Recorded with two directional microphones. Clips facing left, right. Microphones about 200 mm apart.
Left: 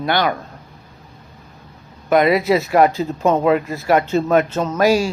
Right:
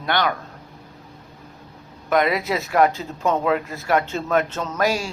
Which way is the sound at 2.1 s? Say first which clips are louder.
Left 6 dB; 10° left (ahead or behind).